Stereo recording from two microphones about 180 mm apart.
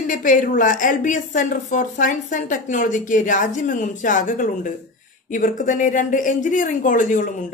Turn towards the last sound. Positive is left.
turn(degrees=45)  # may be behind; listen again after turning